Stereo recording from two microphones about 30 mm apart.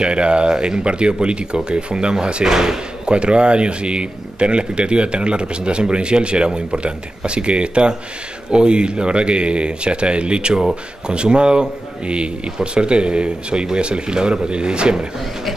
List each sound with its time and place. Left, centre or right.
0.0 s speech: right
2.4 s speech: centre
3.1 s speech: right